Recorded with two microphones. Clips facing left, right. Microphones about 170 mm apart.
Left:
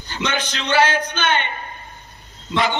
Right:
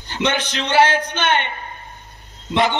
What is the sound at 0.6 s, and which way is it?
Speech, 25° right (ahead or behind).